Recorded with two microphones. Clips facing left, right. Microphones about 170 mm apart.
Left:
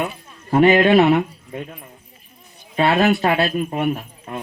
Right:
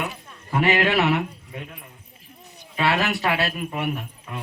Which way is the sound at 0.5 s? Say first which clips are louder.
Left 8 dB; 30° left (ahead or behind).